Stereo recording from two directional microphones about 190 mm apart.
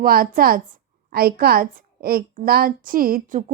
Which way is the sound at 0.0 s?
50° right (ahead or behind).